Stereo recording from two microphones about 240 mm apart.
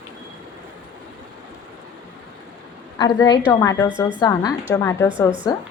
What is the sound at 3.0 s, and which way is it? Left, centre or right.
A woman's voice, centre.